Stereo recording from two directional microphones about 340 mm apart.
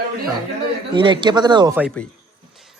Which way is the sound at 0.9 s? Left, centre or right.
Centre.